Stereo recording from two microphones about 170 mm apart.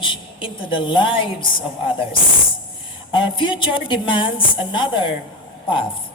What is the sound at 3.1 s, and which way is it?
A woman's voice, 30° left (ahead or behind).